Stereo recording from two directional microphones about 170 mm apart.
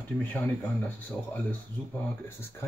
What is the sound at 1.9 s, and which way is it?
Speech, 15° left (ahead or behind).